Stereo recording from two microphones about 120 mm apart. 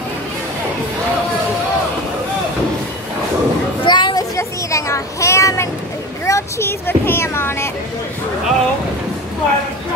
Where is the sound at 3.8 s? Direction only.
40° left (ahead or behind).